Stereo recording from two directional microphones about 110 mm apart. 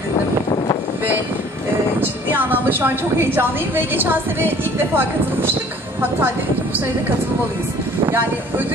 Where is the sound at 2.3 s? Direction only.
15° right (ahead or behind).